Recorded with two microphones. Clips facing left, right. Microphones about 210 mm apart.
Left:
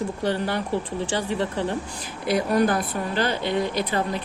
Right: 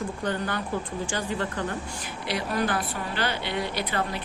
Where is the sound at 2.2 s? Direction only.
45° left (ahead or behind).